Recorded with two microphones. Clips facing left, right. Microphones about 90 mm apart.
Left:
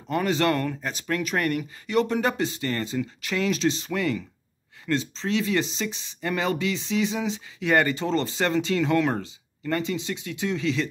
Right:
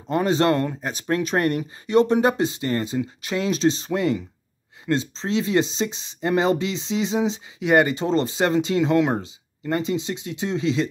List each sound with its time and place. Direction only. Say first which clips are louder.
0.1 s speech: right 4 dB; 25° right (ahead or behind)